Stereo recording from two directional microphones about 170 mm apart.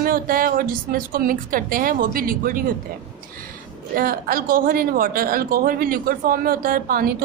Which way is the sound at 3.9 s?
60° right (ahead or behind).